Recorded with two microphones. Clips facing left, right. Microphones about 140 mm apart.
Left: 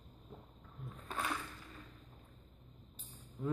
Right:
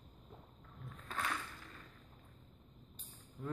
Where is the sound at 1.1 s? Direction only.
15° left (ahead or behind).